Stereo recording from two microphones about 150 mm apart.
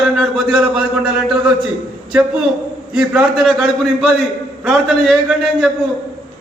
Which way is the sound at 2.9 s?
5° right (ahead or behind).